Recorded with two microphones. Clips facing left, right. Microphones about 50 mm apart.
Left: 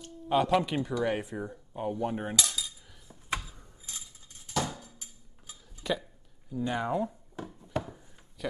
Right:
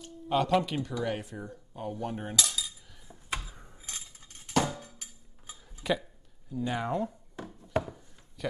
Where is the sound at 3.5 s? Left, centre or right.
Right.